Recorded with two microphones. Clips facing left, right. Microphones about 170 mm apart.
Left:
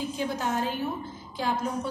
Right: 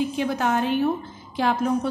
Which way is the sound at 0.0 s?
70° right (ahead or behind).